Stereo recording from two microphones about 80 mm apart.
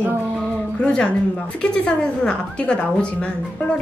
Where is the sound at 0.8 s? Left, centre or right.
Centre.